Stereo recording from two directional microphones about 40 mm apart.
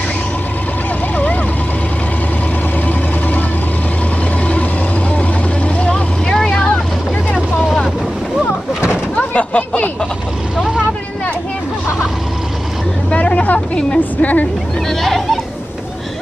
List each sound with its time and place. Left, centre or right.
5.9 s vehicle: left
6.3 s boat: centre
9.3 s a sound: left
13.1 s vehicle: left
13.9 s music: left
14.9 s a sound: centre